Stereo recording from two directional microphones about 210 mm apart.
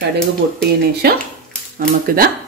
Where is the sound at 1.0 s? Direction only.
50° right (ahead or behind).